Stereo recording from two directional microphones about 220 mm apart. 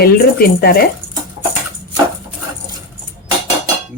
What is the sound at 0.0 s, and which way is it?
Speech, 45° left (ahead or behind).